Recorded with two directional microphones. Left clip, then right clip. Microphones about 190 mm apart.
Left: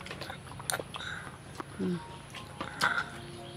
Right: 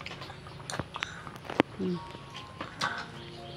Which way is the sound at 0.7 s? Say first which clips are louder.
Left 2 dB; 35° left (ahead or behind).